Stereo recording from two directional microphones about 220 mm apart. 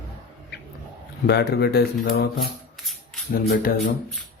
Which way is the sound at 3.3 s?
40° left (ahead or behind).